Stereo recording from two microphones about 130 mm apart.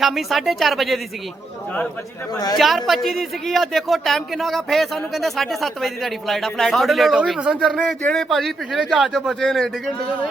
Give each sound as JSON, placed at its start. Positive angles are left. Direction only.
{"t": 0.0, "sound": "speech", "side_deg": 0}
{"t": 2.3, "sound": "a woman's voice", "side_deg": 30}
{"t": 2.6, "sound": "speech", "side_deg": 0}